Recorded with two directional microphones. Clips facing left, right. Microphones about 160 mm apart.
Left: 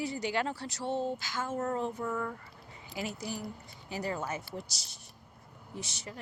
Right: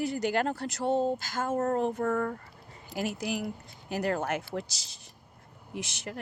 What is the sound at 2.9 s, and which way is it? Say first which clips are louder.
Speech: right 6 dB; 75° right (ahead or behind).